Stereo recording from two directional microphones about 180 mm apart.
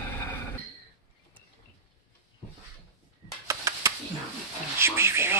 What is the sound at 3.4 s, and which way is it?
Typewriter, 15° right (ahead or behind).